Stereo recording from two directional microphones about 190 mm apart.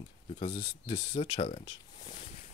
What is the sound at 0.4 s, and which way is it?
Speech, 25° left (ahead or behind).